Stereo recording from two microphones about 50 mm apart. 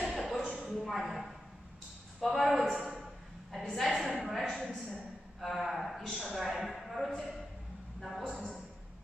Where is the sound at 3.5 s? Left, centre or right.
Centre.